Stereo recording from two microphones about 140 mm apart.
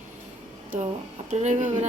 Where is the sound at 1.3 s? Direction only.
60° right (ahead or behind).